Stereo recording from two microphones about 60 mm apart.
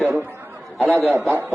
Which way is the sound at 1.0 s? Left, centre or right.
Right.